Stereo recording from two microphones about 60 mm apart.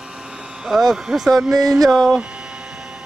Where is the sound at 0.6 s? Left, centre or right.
Centre.